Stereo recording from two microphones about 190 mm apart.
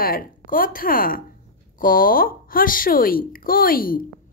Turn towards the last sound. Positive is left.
turn(degrees=50)  # may be behind; listen again after turning